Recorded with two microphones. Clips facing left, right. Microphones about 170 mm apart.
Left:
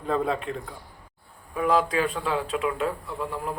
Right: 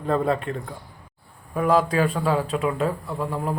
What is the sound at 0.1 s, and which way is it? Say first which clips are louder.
Speech: right 3 dB; centre (ahead or behind).